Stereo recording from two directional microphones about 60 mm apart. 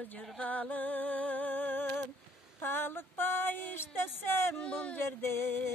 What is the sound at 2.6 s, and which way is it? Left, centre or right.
Speech, left.